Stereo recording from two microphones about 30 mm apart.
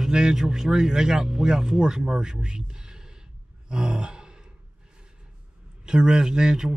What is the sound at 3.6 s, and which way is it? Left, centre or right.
Sigh, right.